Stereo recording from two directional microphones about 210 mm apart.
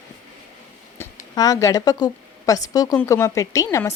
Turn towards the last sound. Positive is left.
turn(degrees=15)  # may be behind; listen again after turning